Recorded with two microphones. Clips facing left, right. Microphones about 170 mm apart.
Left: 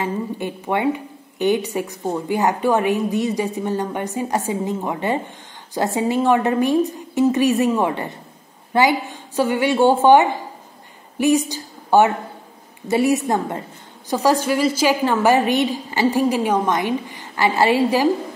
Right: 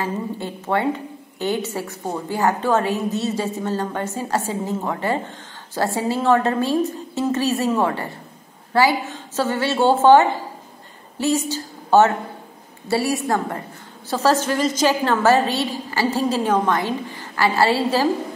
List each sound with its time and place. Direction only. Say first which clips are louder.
0.0 s a woman's voice: left 2 dB; 15° left (ahead or behind)
11.1 s a sound: left 4 dB; 15° left (ahead or behind)
12.8 s a woman's voice: left 3 dB; 20° left (ahead or behind)